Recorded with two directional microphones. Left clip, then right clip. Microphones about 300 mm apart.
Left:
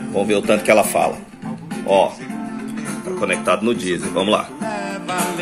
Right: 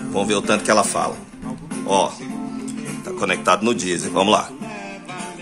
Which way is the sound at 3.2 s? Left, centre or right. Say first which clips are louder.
Right 1 dB; centre.